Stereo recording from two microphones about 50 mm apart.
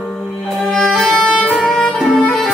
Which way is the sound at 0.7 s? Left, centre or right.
Centre.